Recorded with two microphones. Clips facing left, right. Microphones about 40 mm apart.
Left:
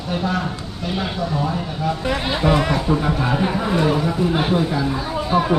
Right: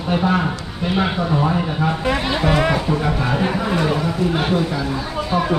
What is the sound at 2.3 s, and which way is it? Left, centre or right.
Speech, centre.